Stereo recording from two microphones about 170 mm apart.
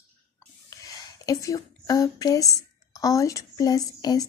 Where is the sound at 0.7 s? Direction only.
20° left (ahead or behind).